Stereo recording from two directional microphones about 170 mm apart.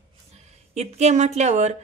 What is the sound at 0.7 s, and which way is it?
Speech, 40° right (ahead or behind).